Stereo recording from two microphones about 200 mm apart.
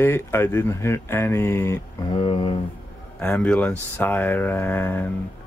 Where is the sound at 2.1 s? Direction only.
25° left (ahead or behind).